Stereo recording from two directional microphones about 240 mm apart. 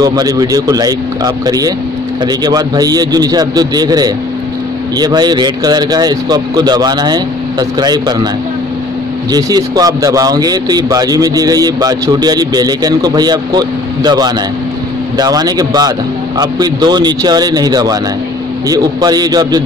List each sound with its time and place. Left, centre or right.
0.0 s speech: centre
9.3 s speech: centre